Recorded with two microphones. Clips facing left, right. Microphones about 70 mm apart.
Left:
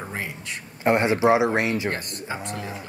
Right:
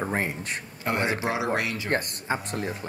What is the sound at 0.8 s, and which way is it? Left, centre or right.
Speech, left.